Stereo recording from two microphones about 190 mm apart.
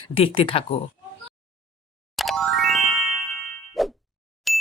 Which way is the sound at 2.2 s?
Centre (ahead or behind).